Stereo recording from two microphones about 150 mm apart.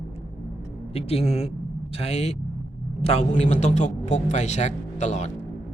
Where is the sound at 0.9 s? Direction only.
40° left (ahead or behind).